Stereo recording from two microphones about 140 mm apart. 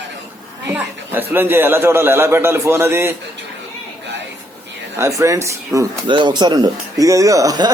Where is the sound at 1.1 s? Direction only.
15° right (ahead or behind).